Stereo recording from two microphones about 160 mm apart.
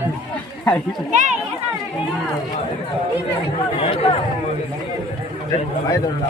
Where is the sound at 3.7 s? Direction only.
35° left (ahead or behind).